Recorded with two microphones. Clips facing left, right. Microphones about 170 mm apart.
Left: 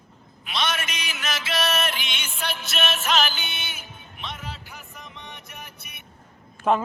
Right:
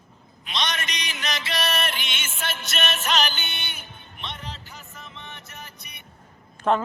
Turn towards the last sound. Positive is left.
turn(degrees=5)  # may be behind; listen again after turning